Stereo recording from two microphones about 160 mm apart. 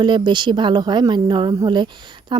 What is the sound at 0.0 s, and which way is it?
A woman's voice, 30° right (ahead or behind).